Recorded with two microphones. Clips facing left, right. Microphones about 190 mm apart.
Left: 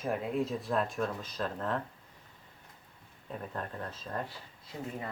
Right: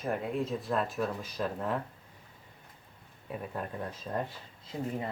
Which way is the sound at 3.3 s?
10° right (ahead or behind).